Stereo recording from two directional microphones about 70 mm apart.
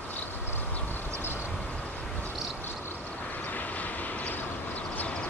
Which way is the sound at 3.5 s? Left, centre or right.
Left.